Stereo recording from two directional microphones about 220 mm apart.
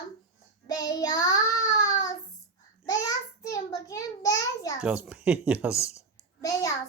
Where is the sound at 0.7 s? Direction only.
15° left (ahead or behind).